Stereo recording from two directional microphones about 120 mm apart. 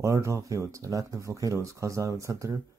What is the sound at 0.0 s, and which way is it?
Speech, 25° right (ahead or behind).